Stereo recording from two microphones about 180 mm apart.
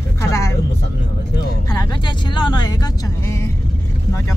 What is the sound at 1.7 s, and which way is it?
Vehicle, 25° left (ahead or behind).